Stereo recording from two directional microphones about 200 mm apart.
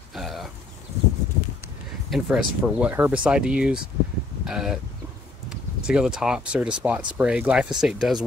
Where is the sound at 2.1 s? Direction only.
Centre (ahead or behind).